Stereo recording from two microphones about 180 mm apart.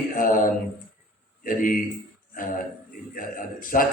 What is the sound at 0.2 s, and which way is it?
Mantra, 50° left (ahead or behind).